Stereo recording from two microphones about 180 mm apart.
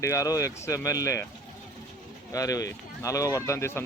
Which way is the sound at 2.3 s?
20° left (ahead or behind).